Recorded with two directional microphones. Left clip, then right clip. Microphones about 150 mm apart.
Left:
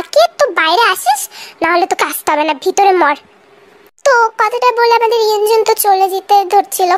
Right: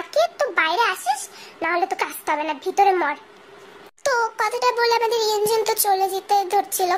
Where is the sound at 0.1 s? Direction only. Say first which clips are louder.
Left 10 dB; 45° left (ahead or behind).